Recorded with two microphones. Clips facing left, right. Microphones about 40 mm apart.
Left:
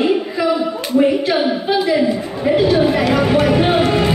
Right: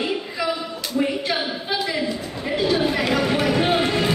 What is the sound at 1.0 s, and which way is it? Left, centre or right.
Speech, centre.